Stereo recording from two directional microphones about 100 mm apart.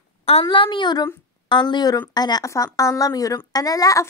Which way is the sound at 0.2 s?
85° left.